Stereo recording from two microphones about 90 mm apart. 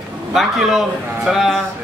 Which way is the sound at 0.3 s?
5° right (ahead or behind).